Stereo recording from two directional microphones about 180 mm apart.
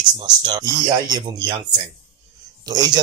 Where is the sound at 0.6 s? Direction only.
20° right (ahead or behind).